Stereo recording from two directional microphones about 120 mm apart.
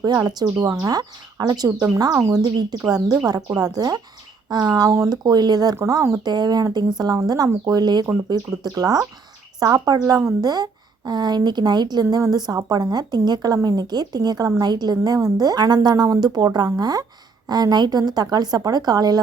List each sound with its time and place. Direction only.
0.2 s a woman's voice: 30° right (ahead or behind)